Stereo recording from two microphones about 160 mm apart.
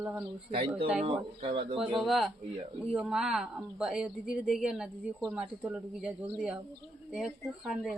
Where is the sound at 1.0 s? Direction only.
35° right (ahead or behind).